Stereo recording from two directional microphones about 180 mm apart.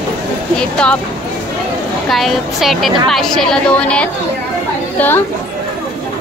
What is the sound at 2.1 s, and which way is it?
A woman's voice, centre (ahead or behind).